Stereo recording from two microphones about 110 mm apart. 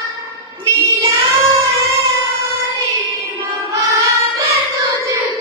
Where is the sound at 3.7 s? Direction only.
30° right (ahead or behind).